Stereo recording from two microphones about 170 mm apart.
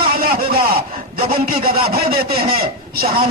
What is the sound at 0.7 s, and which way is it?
Speech, 30° right (ahead or behind).